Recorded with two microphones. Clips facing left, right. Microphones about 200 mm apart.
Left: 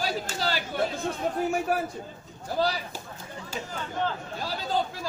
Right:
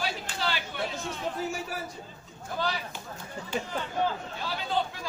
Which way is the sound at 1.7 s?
55° left (ahead or behind).